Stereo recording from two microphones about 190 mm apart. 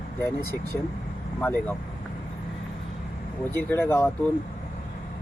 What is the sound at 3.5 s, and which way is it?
Speech, 10° left (ahead or behind).